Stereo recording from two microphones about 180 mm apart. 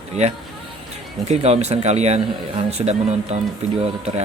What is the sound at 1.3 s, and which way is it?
Speech, 35° right (ahead or behind).